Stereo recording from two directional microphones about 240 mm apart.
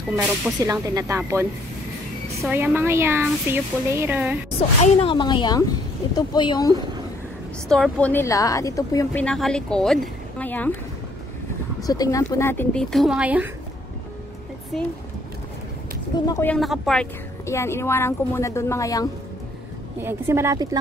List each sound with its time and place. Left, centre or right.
0.7 s a woman's voice: centre
4.6 s speech: left
7.6 s a woman's voice: centre
11.8 s a woman's voice: centre
16.3 s a woman's voice: centre
16.5 s a woman's voice: centre
20.0 s a woman's voice: centre